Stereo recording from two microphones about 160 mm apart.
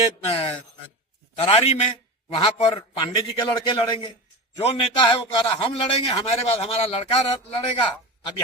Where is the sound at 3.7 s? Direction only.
30° left (ahead or behind).